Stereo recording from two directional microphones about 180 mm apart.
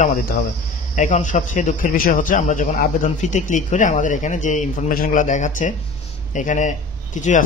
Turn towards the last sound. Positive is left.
turn(degrees=45)  # may be behind; listen again after turning